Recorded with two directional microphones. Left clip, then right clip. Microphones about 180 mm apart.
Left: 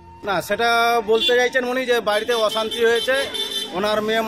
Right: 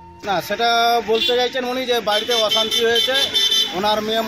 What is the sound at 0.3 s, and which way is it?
A man's voice, 35° left (ahead or behind).